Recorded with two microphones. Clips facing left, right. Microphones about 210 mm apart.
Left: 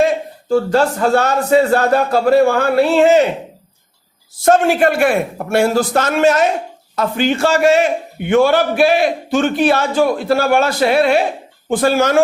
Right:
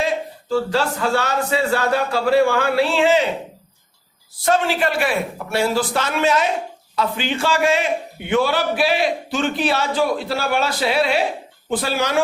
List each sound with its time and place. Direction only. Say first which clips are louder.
0.0 s a man's voice: left 7 dB; 50° left (ahead or behind)
4.4 s a man's voice: left 7 dB; 50° left (ahead or behind)